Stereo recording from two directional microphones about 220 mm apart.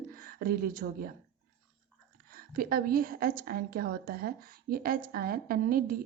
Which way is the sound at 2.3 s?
40° right (ahead or behind).